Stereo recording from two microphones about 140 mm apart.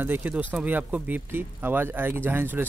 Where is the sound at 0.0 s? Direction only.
15° right (ahead or behind).